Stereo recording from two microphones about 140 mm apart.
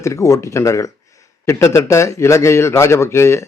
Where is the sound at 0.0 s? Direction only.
20° left (ahead or behind).